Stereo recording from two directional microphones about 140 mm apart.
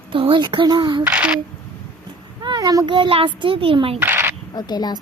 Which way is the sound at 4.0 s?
15° right (ahead or behind).